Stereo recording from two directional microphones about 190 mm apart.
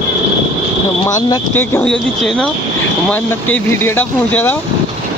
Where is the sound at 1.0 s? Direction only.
15° left (ahead or behind).